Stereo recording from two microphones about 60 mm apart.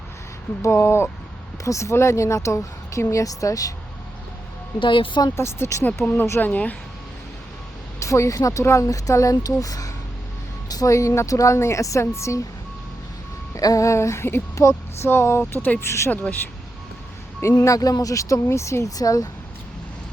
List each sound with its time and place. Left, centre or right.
0.6 s a woman's voice: left
5.3 s speech: left
6.0 s speech: left
7.9 s speech: left
8.6 s a woman's voice: left
13.6 s a woman's voice: left
15.8 s speech: left
16.0 s speech: left
17.5 s speech: left
18.9 s speech: left